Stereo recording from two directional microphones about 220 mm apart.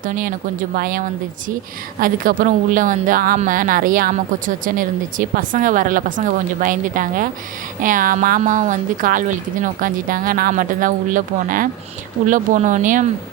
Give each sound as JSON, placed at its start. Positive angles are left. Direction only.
{"t": 0.0, "sound": "a woman's voice", "side_deg": -40}